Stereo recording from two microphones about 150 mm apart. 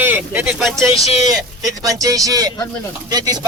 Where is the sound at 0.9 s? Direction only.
45° left (ahead or behind).